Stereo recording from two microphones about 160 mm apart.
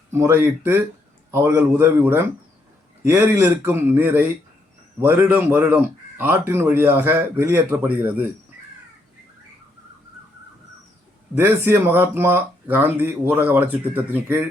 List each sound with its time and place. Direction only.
0.1 s a man's voice: 15° right (ahead or behind)
11.3 s a man's voice: 15° right (ahead or behind)